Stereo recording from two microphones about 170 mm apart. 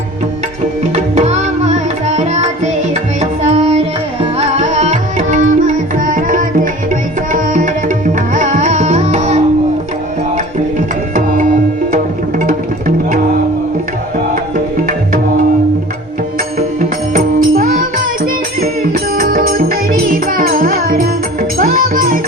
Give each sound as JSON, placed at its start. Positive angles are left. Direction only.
{"t": 0.9, "sound": "tabla", "side_deg": -40}
{"t": 2.9, "sound": "music", "side_deg": -40}
{"t": 7.3, "sound": "tabla", "side_deg": -50}
{"t": 10.3, "sound": "music", "side_deg": -50}
{"t": 14.5, "sound": "music", "side_deg": -55}
{"t": 17.2, "sound": "music", "side_deg": -55}